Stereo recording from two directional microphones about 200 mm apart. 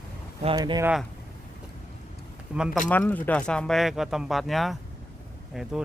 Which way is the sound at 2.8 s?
10° left (ahead or behind).